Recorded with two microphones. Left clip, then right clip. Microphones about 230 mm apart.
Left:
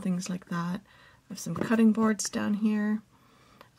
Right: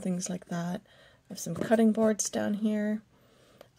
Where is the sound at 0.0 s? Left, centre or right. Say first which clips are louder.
Even; centre.